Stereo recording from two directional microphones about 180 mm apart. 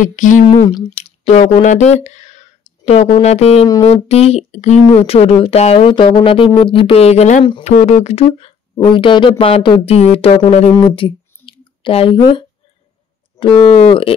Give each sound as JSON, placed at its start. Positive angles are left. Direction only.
{"t": 0.0, "sound": "speech", "side_deg": 45}
{"t": 0.5, "sound": "speech", "side_deg": 25}
{"t": 0.9, "sound": "speech", "side_deg": 35}